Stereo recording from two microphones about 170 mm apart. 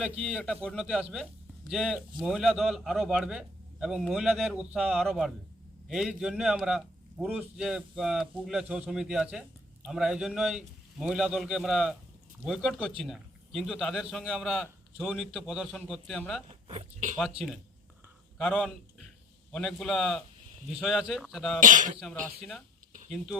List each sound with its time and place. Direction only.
0.0 s a man's voice: 10° right (ahead or behind)
0.6 s a man's voice: 5° left (ahead or behind)
16.6 s speech: 40° right (ahead or behind)
18.3 s a man's voice: centre (ahead or behind)
21.6 s speech: 50° right (ahead or behind)
23.1 s a man's voice: centre (ahead or behind)